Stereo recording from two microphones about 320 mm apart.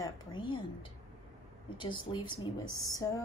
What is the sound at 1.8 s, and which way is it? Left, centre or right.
Speech, centre.